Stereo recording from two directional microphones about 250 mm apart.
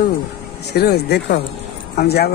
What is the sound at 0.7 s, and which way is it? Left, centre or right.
Speech, left.